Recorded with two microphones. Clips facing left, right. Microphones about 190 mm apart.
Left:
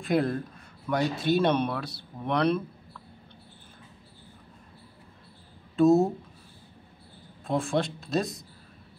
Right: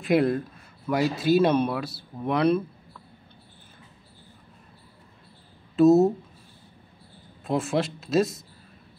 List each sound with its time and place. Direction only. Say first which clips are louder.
0.0 s speech: right 4 dB; centre (ahead or behind)
5.8 s speech: right 3 dB; 5° right (ahead or behind)
7.4 s speech: right 2 dB; 5° right (ahead or behind)